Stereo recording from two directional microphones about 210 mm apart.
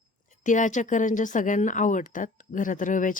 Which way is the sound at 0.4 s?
35° left (ahead or behind).